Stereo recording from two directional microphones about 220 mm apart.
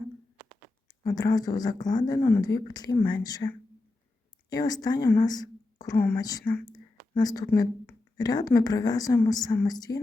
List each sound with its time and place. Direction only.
0.9 s a woman's voice: 15° left (ahead or behind)